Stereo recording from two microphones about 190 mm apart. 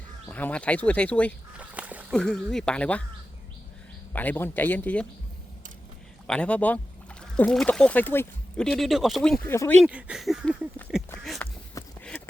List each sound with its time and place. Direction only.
0.3 s speech: 10° left (ahead or behind)
1.5 s a sound: 5° right (ahead or behind)
2.1 s speech: 5° left (ahead or behind)
4.1 s speech: 10° left (ahead or behind)
6.2 s speech: 5° left (ahead or behind)
9.5 s speech: 10° left (ahead or behind)
9.8 s speech: 5° right (ahead or behind)
11.3 s a sound: 15° left (ahead or behind)